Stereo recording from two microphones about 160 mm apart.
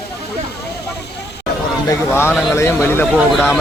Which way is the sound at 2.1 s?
15° left (ahead or behind).